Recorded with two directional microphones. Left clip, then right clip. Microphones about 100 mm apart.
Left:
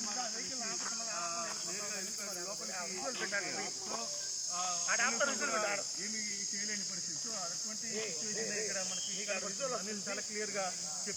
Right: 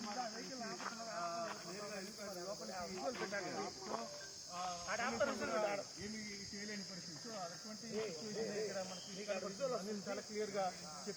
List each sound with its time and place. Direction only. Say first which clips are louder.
4.9 s cricket: left 6 dB; 20° right (ahead or behind)